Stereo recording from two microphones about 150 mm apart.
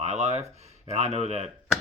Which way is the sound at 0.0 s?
45° right (ahead or behind).